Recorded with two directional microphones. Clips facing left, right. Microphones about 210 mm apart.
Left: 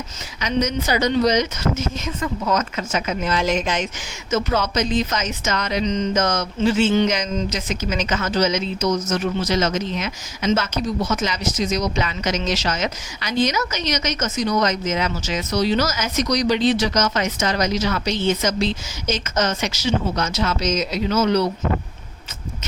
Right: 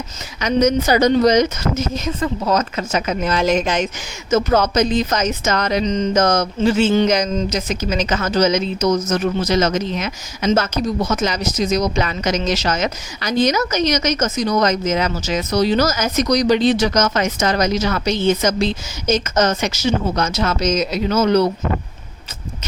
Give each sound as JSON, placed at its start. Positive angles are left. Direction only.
{"t": 0.3, "sound": "a woman's voice", "side_deg": -45}